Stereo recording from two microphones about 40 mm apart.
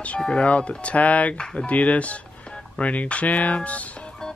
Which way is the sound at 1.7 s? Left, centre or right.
Left.